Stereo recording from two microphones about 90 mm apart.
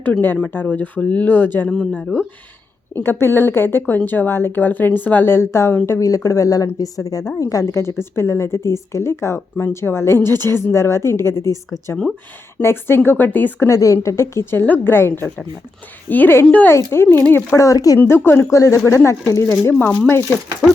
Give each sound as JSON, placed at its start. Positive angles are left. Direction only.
{"t": 0.0, "sound": "speech", "side_deg": 20}
{"t": 1.7, "sound": "speech", "side_deg": 5}
{"t": 2.9, "sound": "speech", "side_deg": 25}
{"t": 12.6, "sound": "speech", "side_deg": 25}
{"t": 13.7, "sound": "speech", "side_deg": 35}
{"t": 16.7, "sound": "speech", "side_deg": 25}
{"t": 17.7, "sound": "speech", "side_deg": 40}